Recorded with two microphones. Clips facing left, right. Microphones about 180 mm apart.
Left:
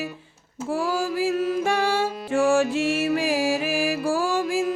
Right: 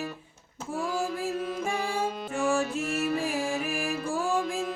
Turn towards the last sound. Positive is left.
turn(degrees=90)